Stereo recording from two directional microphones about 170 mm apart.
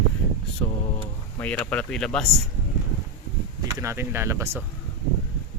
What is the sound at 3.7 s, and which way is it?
Speech, 15° right (ahead or behind).